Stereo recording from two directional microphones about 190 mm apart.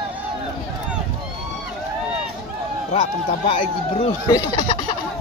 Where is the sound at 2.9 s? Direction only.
30° left (ahead or behind).